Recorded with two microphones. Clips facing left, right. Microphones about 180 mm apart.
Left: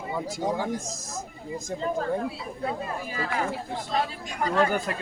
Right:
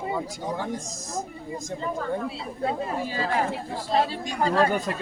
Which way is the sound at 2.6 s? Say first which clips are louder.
Right 4 dB; 25° right (ahead or behind).